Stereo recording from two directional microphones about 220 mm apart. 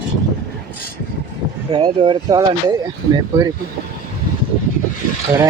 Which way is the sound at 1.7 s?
20° right (ahead or behind).